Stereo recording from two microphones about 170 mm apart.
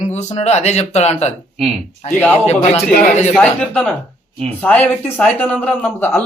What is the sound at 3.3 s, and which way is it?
Speech, 10° left (ahead or behind).